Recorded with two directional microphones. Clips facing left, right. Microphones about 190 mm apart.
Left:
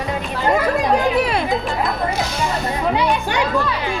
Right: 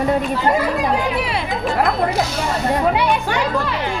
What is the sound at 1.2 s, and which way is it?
Speech, 45° left (ahead or behind).